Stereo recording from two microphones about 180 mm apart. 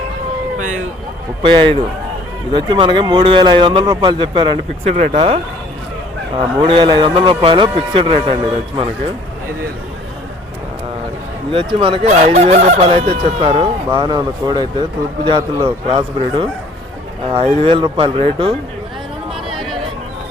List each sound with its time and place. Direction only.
1.4 s speech: 30° right (ahead or behind)
4.9 s speech: 35° right (ahead or behind)
11.5 s speech: 30° right (ahead or behind)
19.5 s a sound: centre (ahead or behind)